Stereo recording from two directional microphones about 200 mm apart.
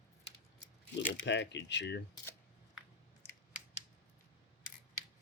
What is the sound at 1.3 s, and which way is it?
Speech, 60° left (ahead or behind).